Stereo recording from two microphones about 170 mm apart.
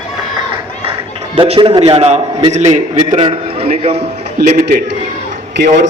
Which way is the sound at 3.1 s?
25° right (ahead or behind).